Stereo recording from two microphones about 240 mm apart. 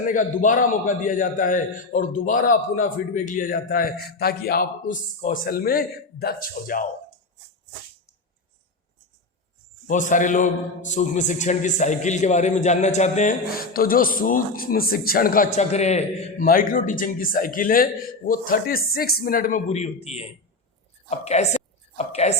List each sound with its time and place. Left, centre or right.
0.1 s a man's voice: left
9.8 s a man's voice: left
21.9 s a sound: left